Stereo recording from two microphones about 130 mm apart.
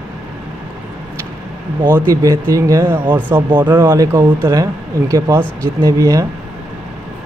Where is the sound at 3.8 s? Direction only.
25° right (ahead or behind).